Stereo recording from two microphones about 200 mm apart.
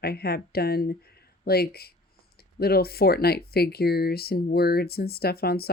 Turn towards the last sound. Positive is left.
turn(degrees=50)  # may be behind; listen again after turning